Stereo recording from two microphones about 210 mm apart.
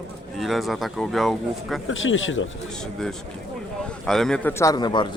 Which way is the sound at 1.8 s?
65° left (ahead or behind).